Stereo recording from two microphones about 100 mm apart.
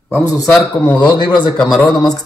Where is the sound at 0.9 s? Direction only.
50° left (ahead or behind).